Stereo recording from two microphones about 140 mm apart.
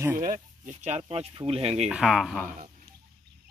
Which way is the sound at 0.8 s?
50° right (ahead or behind).